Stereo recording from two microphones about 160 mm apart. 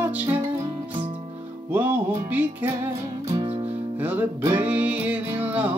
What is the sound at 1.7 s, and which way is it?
Music, 10° right (ahead or behind).